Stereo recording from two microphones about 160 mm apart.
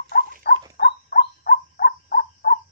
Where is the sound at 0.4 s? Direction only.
85° left.